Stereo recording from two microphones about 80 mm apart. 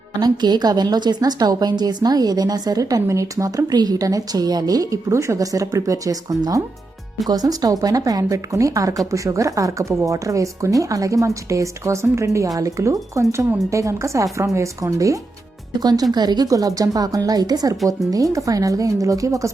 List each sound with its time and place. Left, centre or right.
0.2 s a woman's voice: right
3.1 s speech: right
15.8 s a woman's voice: right